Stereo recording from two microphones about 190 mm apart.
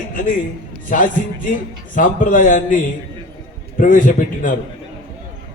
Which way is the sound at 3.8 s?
45° left (ahead or behind).